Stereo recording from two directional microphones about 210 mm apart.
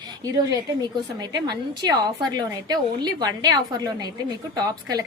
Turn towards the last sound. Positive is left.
turn(degrees=-15)  # may be behind; listen again after turning